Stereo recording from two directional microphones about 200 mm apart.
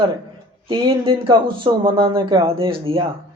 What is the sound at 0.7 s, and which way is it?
Speech, 25° right (ahead or behind).